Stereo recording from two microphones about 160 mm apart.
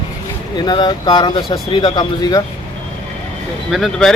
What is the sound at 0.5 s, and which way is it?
Speech, 30° left (ahead or behind).